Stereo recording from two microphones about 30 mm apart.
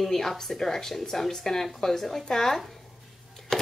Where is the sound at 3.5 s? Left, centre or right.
Centre.